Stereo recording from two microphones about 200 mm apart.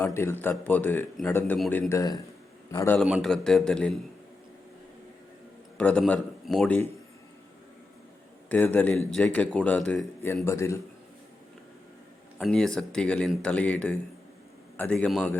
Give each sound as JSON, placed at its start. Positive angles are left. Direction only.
{"t": 0.0, "sound": "a man's voice", "side_deg": 10}
{"t": 1.9, "sound": "a man's voice", "side_deg": 15}
{"t": 3.0, "sound": "speech", "side_deg": 0}
{"t": 5.7, "sound": "a man's voice", "side_deg": 5}
{"t": 8.4, "sound": "a man's voice", "side_deg": 10}
{"t": 12.4, "sound": "speech", "side_deg": 0}